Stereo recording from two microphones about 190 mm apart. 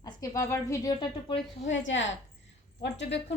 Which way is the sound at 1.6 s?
75° left (ahead or behind).